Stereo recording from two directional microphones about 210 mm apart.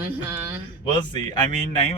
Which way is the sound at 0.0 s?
10° right (ahead or behind).